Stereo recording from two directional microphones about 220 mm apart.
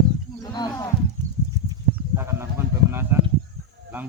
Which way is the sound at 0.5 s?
15° left (ahead or behind).